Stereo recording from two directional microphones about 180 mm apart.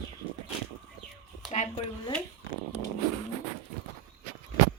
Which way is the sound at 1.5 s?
40° left (ahead or behind).